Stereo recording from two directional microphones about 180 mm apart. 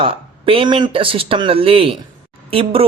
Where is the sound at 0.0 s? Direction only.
30° right (ahead or behind).